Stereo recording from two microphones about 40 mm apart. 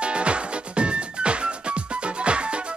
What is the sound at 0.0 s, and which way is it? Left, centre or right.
Music, right.